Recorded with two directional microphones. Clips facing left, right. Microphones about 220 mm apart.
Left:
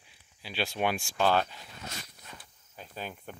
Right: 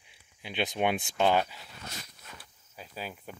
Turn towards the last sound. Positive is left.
turn(degrees=-5)  # may be behind; listen again after turning